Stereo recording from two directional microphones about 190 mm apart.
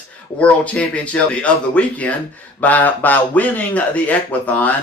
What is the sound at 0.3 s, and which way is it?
Speech, 5° left (ahead or behind).